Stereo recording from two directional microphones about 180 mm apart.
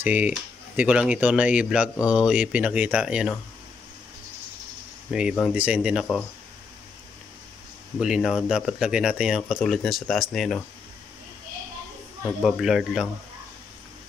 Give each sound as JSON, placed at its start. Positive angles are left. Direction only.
{"t": 0.0, "sound": "speech", "side_deg": -10}
{"t": 5.1, "sound": "speech", "side_deg": -5}
{"t": 8.0, "sound": "speech", "side_deg": 0}
{"t": 12.4, "sound": "speech", "side_deg": 0}